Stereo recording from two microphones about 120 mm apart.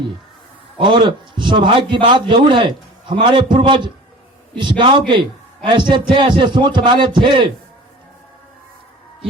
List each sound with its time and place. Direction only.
0.8 s a man's voice: 45° right (ahead or behind)